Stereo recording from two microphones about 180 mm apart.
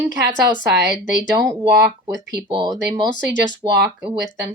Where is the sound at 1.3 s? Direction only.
20° right (ahead or behind).